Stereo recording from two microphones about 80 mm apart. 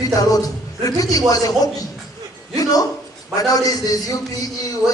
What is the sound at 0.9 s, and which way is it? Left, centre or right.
Speech, left.